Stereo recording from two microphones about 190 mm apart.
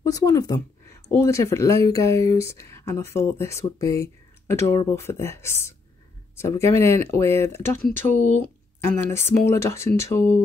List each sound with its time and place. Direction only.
0.0 s speech: 20° left (ahead or behind)
7.9 s speech: 40° right (ahead or behind)
9.1 s speech: 15° left (ahead or behind)